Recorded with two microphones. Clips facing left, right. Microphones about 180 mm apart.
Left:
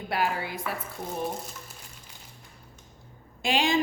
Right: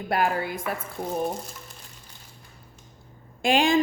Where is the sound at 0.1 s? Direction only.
50° right (ahead or behind).